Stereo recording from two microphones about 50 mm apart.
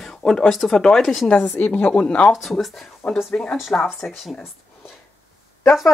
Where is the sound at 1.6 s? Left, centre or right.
Left.